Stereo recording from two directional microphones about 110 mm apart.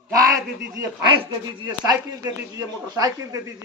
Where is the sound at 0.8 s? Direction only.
45° right (ahead or behind).